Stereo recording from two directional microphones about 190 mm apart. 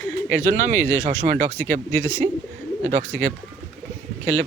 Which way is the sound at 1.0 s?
40° right (ahead or behind).